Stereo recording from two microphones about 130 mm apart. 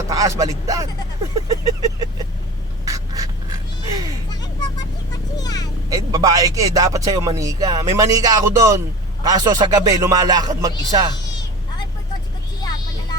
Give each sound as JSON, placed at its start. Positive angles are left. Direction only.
{"t": 0.1, "sound": "speech", "side_deg": -25}
{"t": 1.5, "sound": "vehicle", "side_deg": -25}
{"t": 2.8, "sound": "a sound", "side_deg": -25}
{"t": 4.3, "sound": "vehicle", "side_deg": 30}
{"t": 5.9, "sound": "speech", "side_deg": -25}
{"t": 12.5, "sound": "a sound", "side_deg": 30}